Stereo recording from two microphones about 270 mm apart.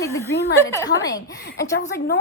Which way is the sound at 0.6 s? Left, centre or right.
Centre.